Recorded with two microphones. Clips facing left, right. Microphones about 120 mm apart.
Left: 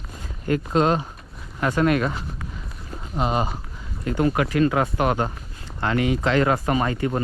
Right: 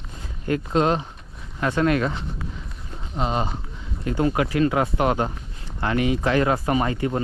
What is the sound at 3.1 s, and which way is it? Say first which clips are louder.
Speech: left 1 dB; 10° left (ahead or behind).